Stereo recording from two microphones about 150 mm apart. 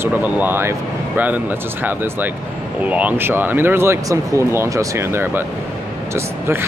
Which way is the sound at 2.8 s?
10° right (ahead or behind).